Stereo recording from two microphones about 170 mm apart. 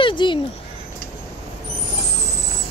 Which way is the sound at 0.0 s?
30° left (ahead or behind).